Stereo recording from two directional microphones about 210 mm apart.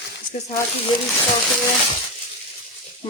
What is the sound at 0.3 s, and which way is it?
Speech, 35° left (ahead or behind).